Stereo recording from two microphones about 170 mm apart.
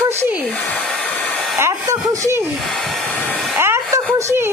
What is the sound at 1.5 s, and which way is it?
Speech, 15° right (ahead or behind).